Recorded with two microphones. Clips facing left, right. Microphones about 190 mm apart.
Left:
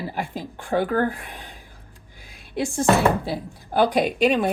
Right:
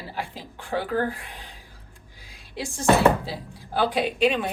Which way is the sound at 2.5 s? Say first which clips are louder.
Left 1 dB; 50° left (ahead or behind).